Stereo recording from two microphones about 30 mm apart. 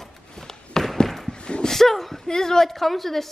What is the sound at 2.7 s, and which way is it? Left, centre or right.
Speech, centre.